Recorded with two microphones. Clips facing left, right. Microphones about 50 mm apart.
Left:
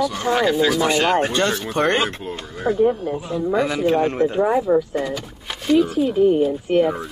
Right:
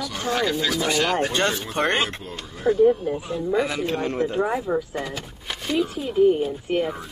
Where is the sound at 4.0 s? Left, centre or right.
Left.